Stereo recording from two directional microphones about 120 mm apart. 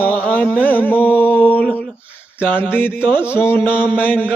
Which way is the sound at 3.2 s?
20° left (ahead or behind).